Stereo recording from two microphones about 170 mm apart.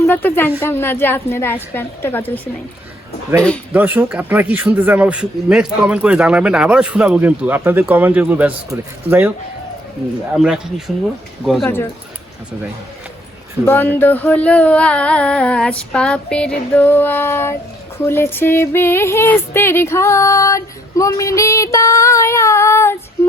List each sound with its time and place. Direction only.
0.0 s speech: 10° left (ahead or behind)
0.6 s female singing: 15° left (ahead or behind)
3.7 s speech: 10° right (ahead or behind)
10.3 s speech: 5° right (ahead or behind)
11.6 s female singing: 15° left (ahead or behind)
13.7 s female singing: 10° left (ahead or behind)